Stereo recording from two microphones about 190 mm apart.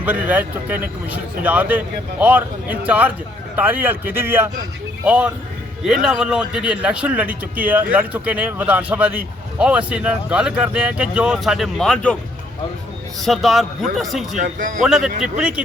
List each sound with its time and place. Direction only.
0.0 s a man's voice: 10° right (ahead or behind)
13.2 s a man's voice: centre (ahead or behind)
14.3 s a man's voice: 40° right (ahead or behind)
14.8 s a man's voice: centre (ahead or behind)